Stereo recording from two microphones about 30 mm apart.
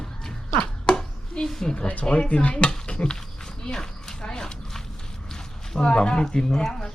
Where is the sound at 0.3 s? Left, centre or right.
Left.